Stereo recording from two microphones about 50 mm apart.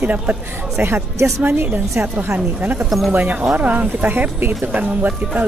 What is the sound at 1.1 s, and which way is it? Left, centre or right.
Speech, right.